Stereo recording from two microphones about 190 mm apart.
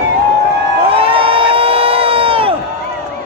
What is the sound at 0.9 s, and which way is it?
Crowd, 30° right (ahead or behind).